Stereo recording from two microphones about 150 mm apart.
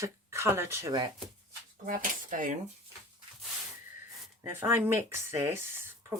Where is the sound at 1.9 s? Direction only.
65° right (ahead or behind).